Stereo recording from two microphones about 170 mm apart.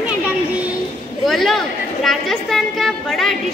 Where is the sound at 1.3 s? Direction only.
Centre (ahead or behind).